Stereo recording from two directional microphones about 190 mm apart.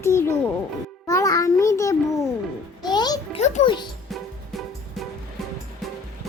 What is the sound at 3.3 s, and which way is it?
Music, 35° left (ahead or behind).